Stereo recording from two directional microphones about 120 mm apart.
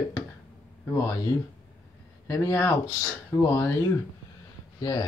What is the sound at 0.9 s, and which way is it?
Speech, 25° left (ahead or behind).